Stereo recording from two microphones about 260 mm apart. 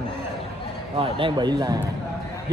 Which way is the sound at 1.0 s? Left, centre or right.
Centre.